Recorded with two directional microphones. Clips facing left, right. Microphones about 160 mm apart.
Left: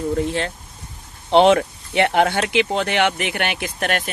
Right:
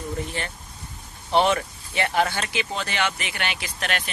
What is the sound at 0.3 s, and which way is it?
Speech, 70° left (ahead or behind).